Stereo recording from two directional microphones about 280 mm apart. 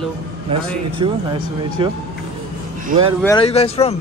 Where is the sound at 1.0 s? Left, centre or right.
Centre.